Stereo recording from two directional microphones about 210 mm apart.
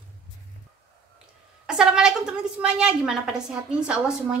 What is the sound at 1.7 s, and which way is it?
A woman's voice, 5° right (ahead or behind).